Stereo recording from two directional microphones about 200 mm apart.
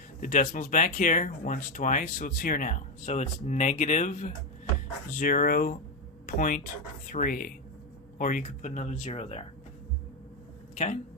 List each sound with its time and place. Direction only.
0.2 s speech: 45° left (ahead or behind)
10.8 s speech: 40° left (ahead or behind)